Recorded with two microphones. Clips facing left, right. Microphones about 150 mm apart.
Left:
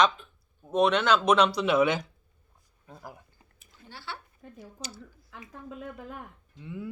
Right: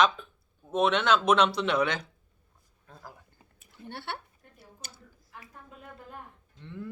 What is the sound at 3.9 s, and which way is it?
Speech, 60° right (ahead or behind).